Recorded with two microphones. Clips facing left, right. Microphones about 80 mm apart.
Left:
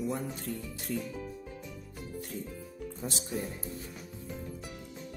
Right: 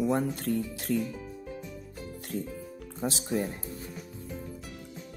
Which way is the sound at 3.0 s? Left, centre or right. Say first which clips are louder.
Right 7 dB; right.